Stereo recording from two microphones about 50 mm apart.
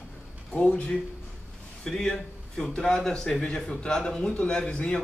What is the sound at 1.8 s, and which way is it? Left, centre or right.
A man's voice, centre.